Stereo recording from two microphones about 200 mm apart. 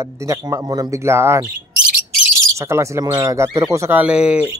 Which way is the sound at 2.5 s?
15° right (ahead or behind).